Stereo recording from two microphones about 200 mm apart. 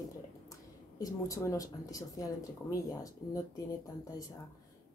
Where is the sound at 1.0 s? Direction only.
15° left (ahead or behind).